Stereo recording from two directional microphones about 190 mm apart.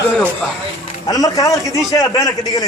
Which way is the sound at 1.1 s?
20° left (ahead or behind).